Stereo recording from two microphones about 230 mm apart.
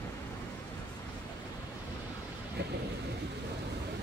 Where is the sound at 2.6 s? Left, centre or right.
Right.